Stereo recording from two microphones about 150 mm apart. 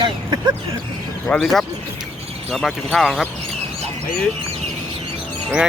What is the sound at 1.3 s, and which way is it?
Speech, centre (ahead or behind).